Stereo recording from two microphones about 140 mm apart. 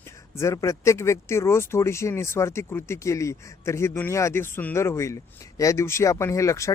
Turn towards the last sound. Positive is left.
turn(degrees=20)  # may be behind; listen again after turning